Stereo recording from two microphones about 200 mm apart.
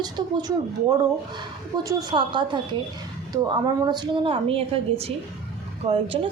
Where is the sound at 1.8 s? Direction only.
20° right (ahead or behind).